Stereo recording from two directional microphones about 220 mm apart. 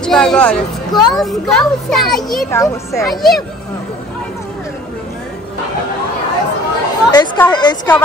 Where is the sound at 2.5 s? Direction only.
15° left (ahead or behind).